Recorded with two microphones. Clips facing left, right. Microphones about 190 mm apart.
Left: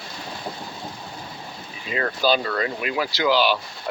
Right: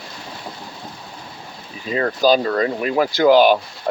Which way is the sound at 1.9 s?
40° right (ahead or behind).